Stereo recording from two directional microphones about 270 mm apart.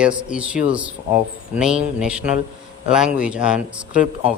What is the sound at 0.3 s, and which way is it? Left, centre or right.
A man's voice, centre.